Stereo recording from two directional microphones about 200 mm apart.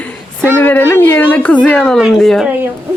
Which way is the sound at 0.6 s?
10° left (ahead or behind).